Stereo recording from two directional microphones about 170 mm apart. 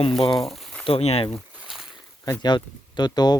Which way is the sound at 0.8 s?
35° left (ahead or behind).